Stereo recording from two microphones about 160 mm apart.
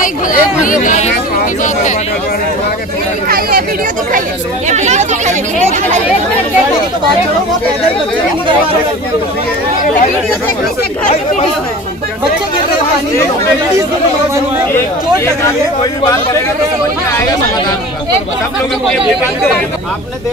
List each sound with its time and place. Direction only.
0.0 s speech: 55° left (ahead or behind)
3.3 s speech: 70° right (ahead or behind)
4.6 s speech: 45° right (ahead or behind)
15.4 s a man's voice: 20° left (ahead or behind)